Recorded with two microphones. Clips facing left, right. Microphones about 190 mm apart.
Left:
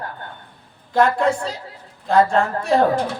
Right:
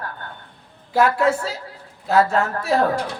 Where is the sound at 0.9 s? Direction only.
5° right (ahead or behind).